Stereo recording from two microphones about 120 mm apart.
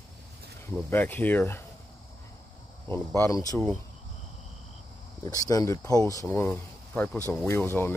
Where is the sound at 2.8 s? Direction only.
20° left (ahead or behind).